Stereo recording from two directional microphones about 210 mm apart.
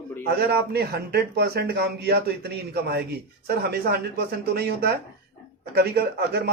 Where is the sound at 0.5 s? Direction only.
50° right (ahead or behind).